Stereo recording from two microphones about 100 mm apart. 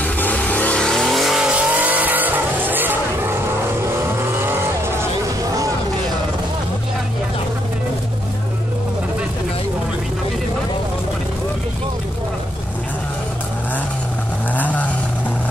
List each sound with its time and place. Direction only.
0.0 s vehicle: 15° left (ahead or behind); by 5.0 s 25° right (ahead or behind)
14.5 s vehicle: 15° left (ahead or behind)